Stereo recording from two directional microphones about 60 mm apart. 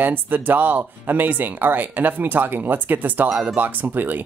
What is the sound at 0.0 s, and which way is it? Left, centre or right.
Speech, right.